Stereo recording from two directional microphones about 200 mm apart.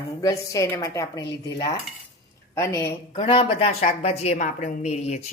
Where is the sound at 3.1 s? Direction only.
25° left (ahead or behind).